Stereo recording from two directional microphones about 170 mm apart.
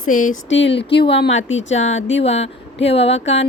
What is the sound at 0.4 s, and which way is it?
Speech, 90° left.